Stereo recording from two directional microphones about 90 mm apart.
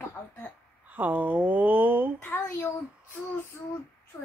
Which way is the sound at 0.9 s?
20° right (ahead or behind).